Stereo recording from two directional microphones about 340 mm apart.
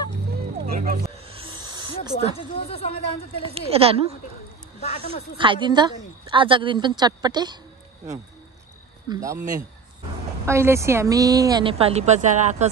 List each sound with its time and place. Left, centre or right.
0.7 s snake: right
2.2 s speech: centre
3.4 s a woman's voice: centre
4.7 s speech: centre
5.4 s a woman's voice: centre
9.1 s a woman's voice: centre
10.4 s a woman's voice: centre